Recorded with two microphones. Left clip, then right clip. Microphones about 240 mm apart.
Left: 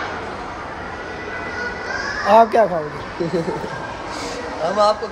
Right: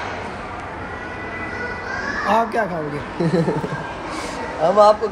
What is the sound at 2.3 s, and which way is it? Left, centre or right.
Speech, left.